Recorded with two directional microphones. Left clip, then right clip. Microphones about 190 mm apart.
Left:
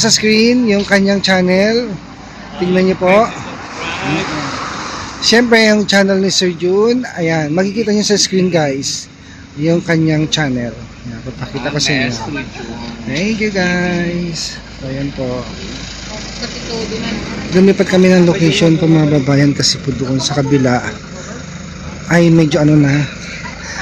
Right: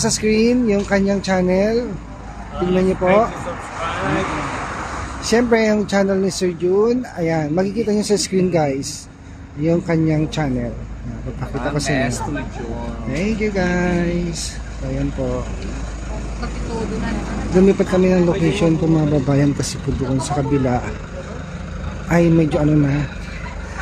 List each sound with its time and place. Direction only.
0.0 s speech: 5° right (ahead or behind)
5.2 s speech: centre (ahead or behind)
11.6 s a man's voice: 10° right (ahead or behind)
13.2 s speech: 5° right (ahead or behind)
17.6 s speech: centre (ahead or behind)
22.0 s a man's voice: centre (ahead or behind)